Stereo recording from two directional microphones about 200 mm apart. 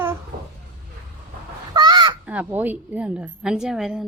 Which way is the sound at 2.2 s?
5° right (ahead or behind).